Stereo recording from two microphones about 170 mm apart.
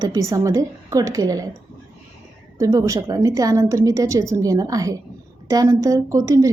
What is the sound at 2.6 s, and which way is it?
A woman's voice, 20° right (ahead or behind).